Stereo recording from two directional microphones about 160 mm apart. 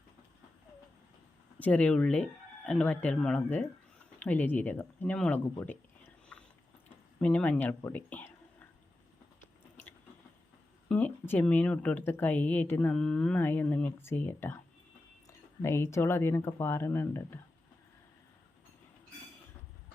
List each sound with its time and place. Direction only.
1.5 s speech: 10° left (ahead or behind)
7.8 s a sound: 15° left (ahead or behind)
10.8 s speech: 10° left (ahead or behind)